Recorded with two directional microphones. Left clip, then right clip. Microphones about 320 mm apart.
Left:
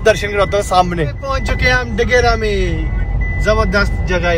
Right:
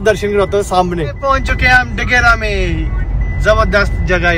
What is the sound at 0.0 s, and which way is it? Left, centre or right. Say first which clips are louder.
Speech: even; centre.